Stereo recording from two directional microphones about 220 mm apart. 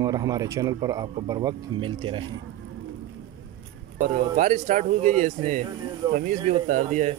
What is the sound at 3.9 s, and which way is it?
Speech, 35° right (ahead or behind).